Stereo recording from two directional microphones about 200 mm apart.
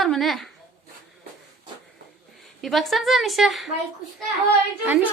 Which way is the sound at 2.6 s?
Centre (ahead or behind).